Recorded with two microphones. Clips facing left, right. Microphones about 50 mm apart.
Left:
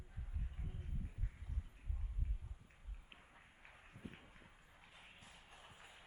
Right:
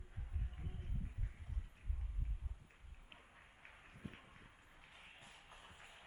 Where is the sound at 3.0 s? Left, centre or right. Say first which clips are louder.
Right 1 dB; centre.